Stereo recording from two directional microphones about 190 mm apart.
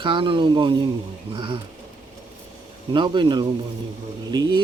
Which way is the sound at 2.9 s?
25° right (ahead or behind).